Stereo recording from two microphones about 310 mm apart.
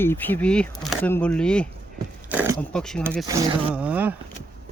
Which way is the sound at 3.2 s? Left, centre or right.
Centre.